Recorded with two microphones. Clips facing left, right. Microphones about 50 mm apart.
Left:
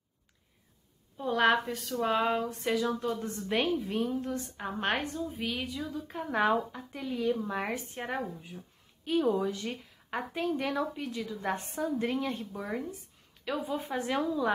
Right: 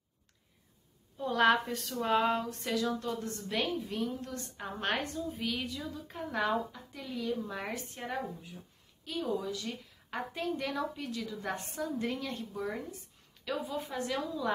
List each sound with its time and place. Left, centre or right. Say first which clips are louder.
1.1 s a woman's voice: left 1 dB; centre
6.3 s a woman's voice: left 4 dB; left
10.1 s a woman's voice: left 3 dB; centre